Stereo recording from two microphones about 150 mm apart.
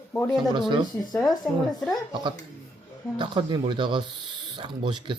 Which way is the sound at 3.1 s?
30° right (ahead or behind).